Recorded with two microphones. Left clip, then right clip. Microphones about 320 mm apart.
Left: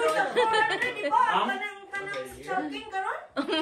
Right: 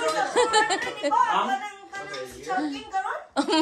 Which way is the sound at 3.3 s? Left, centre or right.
Centre.